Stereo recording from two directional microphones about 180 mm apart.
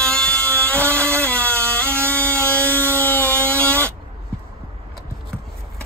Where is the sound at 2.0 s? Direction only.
15° right (ahead or behind).